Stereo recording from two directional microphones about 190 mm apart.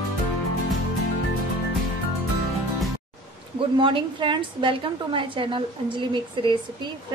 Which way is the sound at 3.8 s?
25° right (ahead or behind).